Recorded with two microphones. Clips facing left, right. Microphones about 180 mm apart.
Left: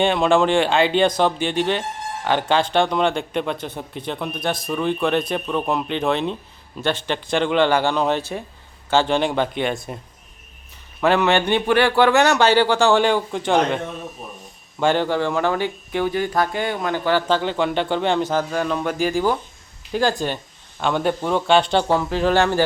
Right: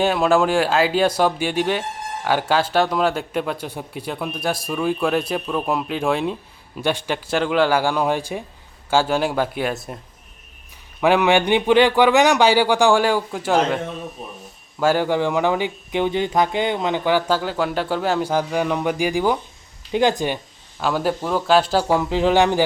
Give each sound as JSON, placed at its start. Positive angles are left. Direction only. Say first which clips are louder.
{"t": 0.0, "sound": "speech", "louder": "even", "side_deg": -5}
{"t": 11.0, "sound": "speech", "louder": "right 1 dB", "side_deg": -15}
{"t": 20.7, "sound": "speech", "louder": "even", "side_deg": -5}